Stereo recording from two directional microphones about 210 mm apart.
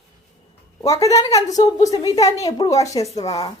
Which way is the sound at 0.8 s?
15° left (ahead or behind).